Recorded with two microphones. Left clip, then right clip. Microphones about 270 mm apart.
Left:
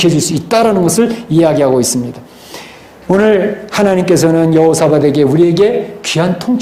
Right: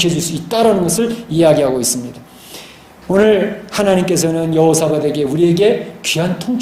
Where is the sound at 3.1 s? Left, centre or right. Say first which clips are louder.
Left 2 dB; centre.